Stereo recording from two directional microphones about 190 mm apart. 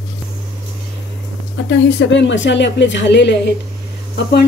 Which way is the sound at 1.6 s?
70° left (ahead or behind).